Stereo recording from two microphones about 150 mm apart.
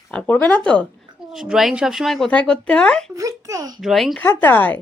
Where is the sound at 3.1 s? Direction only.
20° right (ahead or behind).